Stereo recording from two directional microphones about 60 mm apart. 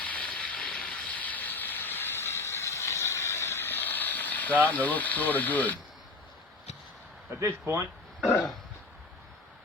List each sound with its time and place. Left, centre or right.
0.0 s vehicle: left
7.3 s speech: right